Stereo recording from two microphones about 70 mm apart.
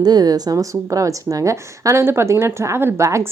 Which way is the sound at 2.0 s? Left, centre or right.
Right.